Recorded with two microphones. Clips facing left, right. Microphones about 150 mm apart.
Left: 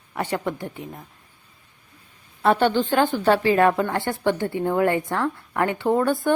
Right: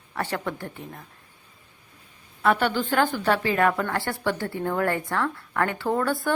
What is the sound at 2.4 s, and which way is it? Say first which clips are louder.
A woman's voice: left 4 dB; 30° left (ahead or behind).